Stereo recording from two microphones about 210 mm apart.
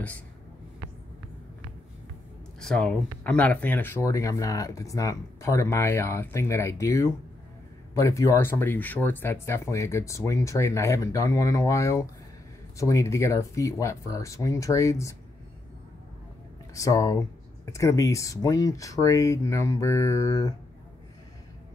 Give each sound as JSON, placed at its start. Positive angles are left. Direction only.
{"t": 2.6, "sound": "speech", "side_deg": 5}
{"t": 16.7, "sound": "speech", "side_deg": 15}